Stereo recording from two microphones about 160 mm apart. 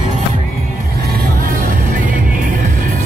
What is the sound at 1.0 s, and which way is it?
Music, 70° right (ahead or behind).